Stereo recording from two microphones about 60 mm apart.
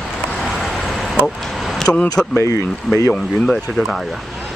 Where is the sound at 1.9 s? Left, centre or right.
Centre.